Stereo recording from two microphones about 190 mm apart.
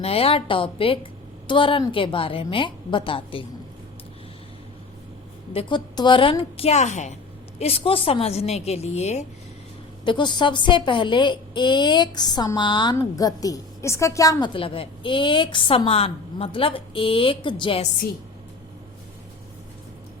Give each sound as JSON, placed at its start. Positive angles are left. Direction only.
{"t": 0.0, "sound": "a woman's voice", "side_deg": 30}
{"t": 5.5, "sound": "a woman's voice", "side_deg": 25}
{"t": 10.0, "sound": "a woman's voice", "side_deg": 25}